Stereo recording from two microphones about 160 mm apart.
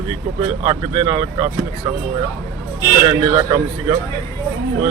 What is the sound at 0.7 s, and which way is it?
Speech, 30° right (ahead or behind).